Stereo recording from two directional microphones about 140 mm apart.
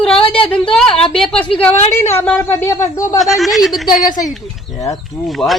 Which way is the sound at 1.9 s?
20° left (ahead or behind).